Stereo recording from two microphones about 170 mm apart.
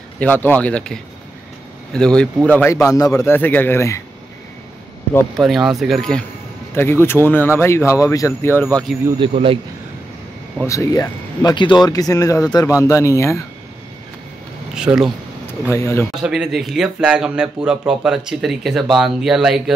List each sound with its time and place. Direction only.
0.2 s speech: 10° left (ahead or behind)
2.0 s speech: 5° left (ahead or behind)
5.4 s speech: centre (ahead or behind)
6.7 s speech: 15° left (ahead or behind)
9.2 s speech: 30° right (ahead or behind)
10.6 s speech: 20° left (ahead or behind)
14.8 s speech: 5° right (ahead or behind)
15.7 s speech: 15° left (ahead or behind)
16.2 s speech: 5° right (ahead or behind)